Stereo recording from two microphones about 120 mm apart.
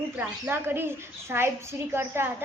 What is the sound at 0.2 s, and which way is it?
A woman's voice, 15° right (ahead or behind).